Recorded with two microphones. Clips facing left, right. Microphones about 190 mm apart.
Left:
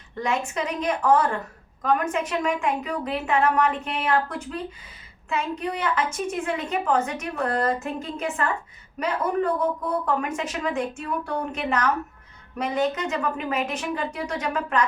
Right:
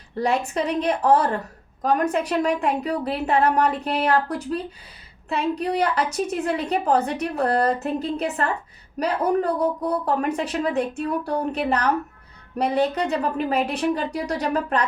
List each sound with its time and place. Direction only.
0.2 s speech: 35° right (ahead or behind)